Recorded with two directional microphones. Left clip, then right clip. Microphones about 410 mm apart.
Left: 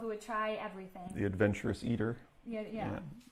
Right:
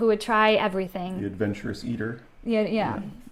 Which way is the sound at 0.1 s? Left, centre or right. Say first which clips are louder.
Right 14 dB; right.